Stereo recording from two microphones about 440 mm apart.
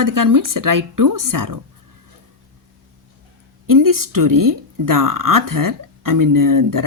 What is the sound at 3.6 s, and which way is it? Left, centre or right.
A woman's voice, right.